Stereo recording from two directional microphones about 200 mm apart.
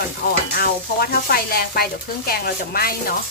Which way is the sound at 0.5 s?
50° left (ahead or behind).